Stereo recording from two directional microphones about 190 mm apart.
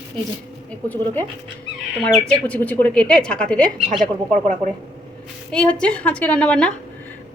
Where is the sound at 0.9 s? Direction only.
10° left (ahead or behind).